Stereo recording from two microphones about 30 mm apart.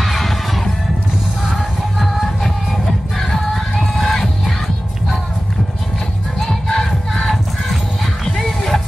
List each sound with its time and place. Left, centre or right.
0.0 s music: centre
1.5 s music: centre
3.2 s music: centre
6.4 s music: centre